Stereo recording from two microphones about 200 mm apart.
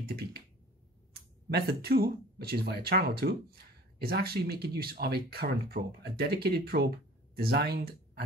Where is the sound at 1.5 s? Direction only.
50° right (ahead or behind).